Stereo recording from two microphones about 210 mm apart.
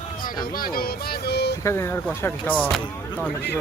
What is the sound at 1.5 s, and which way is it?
Speech, 10° left (ahead or behind).